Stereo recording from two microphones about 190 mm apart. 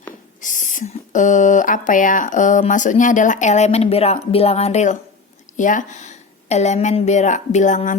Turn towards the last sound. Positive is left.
turn(degrees=40)  # may be behind; listen again after turning